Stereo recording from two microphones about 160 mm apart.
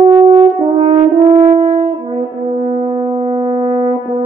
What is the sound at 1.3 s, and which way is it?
French horn, 30° right (ahead or behind).